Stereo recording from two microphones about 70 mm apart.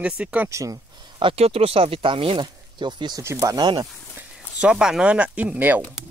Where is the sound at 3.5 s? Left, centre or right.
Right.